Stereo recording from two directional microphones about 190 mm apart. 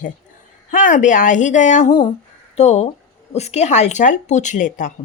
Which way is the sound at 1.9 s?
20° left (ahead or behind).